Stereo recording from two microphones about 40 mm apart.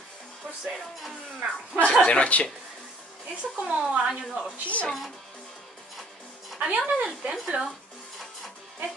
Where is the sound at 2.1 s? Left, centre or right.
Left.